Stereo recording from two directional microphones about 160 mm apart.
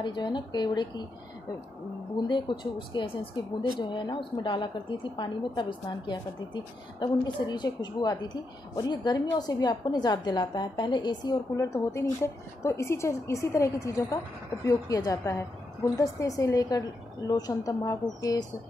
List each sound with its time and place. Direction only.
0.0 s a woman's voice: 30° left (ahead or behind)
2.2 s a woman's voice: 30° left (ahead or behind)